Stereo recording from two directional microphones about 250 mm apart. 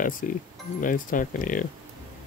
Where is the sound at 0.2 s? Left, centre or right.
Left.